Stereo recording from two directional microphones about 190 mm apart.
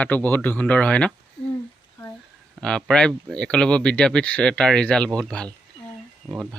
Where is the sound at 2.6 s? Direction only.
5° left (ahead or behind).